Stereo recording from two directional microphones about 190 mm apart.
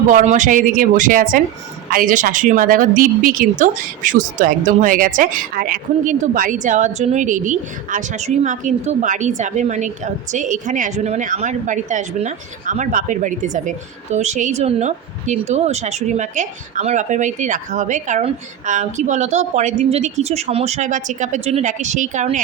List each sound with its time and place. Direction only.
0.1 s a woman's voice: 40° right (ahead or behind)